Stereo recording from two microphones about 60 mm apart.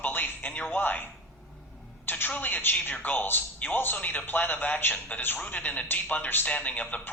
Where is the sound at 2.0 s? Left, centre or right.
Left.